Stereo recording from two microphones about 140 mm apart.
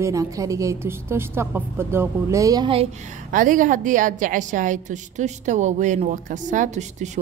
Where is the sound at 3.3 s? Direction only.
70° right (ahead or behind).